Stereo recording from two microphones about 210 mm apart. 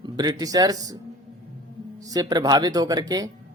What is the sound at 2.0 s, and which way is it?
Speech, 15° right (ahead or behind).